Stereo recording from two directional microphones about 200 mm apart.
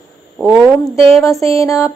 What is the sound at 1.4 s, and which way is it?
Mantra, 15° left (ahead or behind).